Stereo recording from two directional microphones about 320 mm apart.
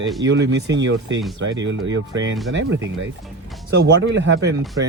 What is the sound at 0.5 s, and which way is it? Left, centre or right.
Speech, right.